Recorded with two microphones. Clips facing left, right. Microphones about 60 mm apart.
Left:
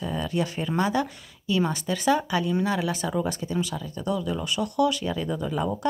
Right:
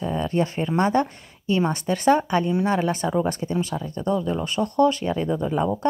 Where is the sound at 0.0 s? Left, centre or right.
Right.